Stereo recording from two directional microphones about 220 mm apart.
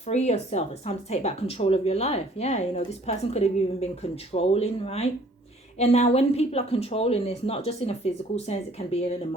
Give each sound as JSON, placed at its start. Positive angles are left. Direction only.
{"t": 0.1, "sound": "a woman's voice", "side_deg": 30}